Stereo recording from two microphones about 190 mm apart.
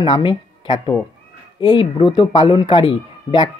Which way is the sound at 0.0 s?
25° left (ahead or behind).